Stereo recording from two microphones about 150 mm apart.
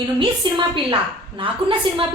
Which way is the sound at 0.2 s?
35° right (ahead or behind).